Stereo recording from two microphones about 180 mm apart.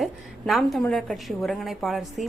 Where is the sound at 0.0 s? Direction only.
Centre (ahead or behind).